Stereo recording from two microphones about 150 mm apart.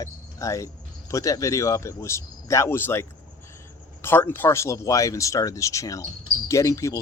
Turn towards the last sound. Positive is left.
turn(degrees=20)  # may be behind; listen again after turning